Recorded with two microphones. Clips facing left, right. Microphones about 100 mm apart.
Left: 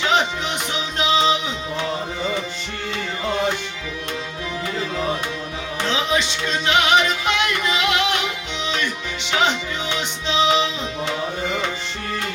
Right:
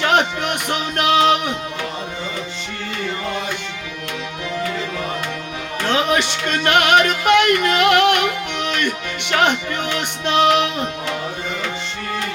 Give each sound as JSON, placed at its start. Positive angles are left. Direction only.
{"t": 0.0, "sound": "music", "side_deg": -55}
{"t": 5.8, "sound": "music", "side_deg": -55}